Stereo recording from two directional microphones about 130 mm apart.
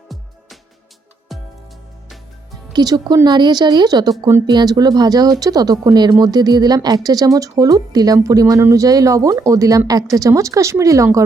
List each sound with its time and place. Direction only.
1.3 s music: centre (ahead or behind)
2.7 s a woman's voice: 30° right (ahead or behind)